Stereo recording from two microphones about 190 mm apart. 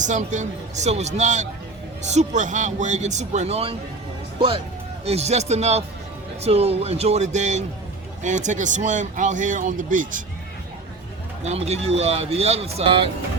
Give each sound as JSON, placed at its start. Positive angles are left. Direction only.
{"t": 0.0, "sound": "speech", "side_deg": -40}
{"t": 11.4, "sound": "speech", "side_deg": -35}